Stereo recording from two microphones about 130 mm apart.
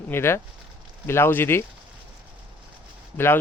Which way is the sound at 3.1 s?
15° left (ahead or behind).